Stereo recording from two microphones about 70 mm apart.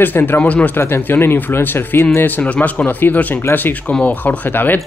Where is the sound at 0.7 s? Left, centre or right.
Left.